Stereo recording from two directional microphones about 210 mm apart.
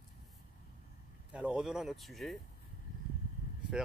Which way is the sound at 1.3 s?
5° right (ahead or behind).